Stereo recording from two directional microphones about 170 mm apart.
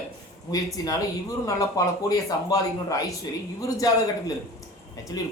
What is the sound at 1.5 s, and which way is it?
Speech, 20° left (ahead or behind).